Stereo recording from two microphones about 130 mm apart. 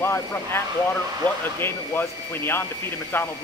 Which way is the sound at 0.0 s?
20° left (ahead or behind).